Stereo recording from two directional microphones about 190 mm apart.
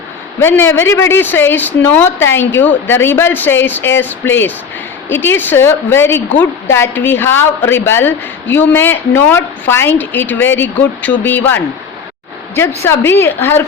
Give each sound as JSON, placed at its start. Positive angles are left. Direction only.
{"t": 0.4, "sound": "a woman's voice", "side_deg": 10}